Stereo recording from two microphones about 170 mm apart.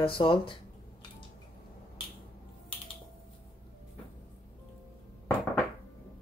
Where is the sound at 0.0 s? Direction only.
30° left (ahead or behind).